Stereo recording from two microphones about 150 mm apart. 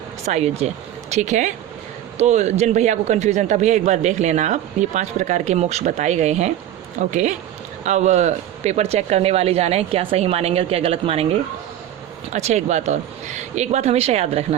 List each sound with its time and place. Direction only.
0.3 s a man's voice: 45° right (ahead or behind)
12.3 s a man's voice: 50° right (ahead or behind)